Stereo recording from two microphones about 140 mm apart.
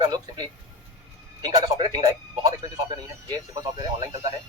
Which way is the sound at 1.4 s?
25° right (ahead or behind).